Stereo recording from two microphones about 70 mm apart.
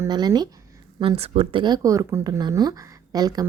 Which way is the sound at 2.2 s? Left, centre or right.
Right.